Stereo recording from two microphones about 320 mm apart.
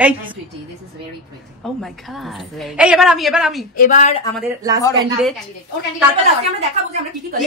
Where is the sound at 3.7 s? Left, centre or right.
Left.